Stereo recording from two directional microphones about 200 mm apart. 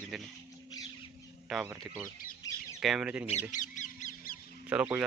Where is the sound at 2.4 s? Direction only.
20° left (ahead or behind).